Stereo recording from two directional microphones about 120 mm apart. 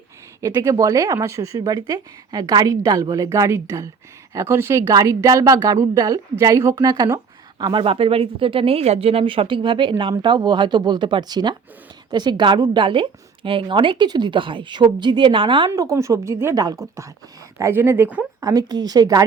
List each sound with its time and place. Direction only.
0.4 s a woman's voice: 25° right (ahead or behind); by 15.7 s 40° right (ahead or behind)
15.7 s speech: 30° right (ahead or behind)
18.3 s a woman's voice: 30° right (ahead or behind)